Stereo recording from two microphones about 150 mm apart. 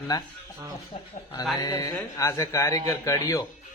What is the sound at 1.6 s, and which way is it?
Mantra, 25° left (ahead or behind).